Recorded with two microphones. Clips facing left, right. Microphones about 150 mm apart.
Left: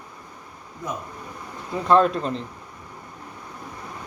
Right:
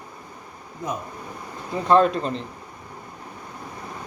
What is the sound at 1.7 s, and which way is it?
Speech, centre (ahead or behind).